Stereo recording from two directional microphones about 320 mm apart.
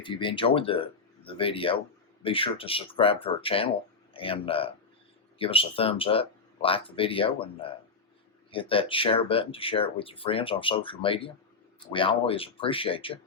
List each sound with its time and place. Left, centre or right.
0.0 s speech: centre